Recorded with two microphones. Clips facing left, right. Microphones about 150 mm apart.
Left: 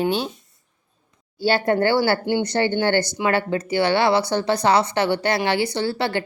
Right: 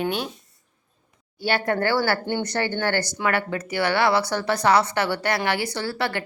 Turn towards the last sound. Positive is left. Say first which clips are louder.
# left 4 dB
turn(degrees=25)  # may be behind; listen again after turning